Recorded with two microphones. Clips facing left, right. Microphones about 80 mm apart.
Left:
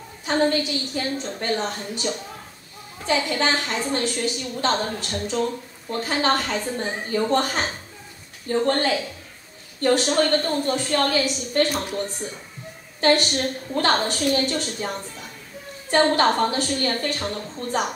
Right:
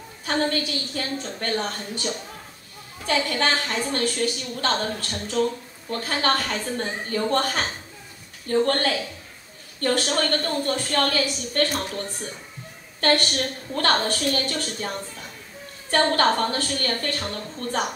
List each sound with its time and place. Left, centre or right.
0.2 s a woman's voice: centre
3.1 s a woman's voice: centre
13.0 s a woman's voice: centre
15.9 s a woman's voice: centre